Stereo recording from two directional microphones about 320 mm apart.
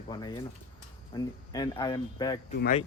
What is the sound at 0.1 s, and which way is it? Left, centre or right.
Speech, centre.